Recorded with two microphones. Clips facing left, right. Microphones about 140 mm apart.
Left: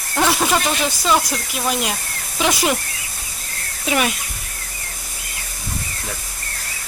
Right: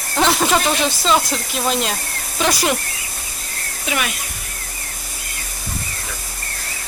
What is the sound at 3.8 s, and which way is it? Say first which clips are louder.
Speech: left 4 dB; 35° left (ahead or behind).